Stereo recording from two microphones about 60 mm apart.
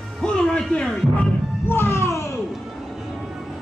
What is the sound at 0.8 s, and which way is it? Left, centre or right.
Speech, centre.